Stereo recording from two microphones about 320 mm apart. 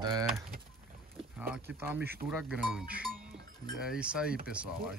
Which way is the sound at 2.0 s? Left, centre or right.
Right.